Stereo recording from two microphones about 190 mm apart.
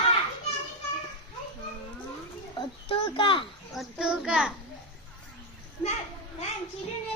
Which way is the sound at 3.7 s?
Centre (ahead or behind).